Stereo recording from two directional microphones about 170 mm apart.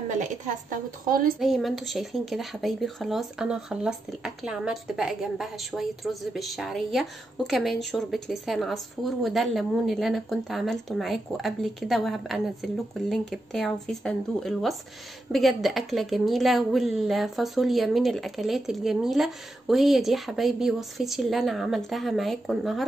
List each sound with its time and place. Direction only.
0.1 s speech: 45° right (ahead or behind)
1.4 s a woman's voice: centre (ahead or behind)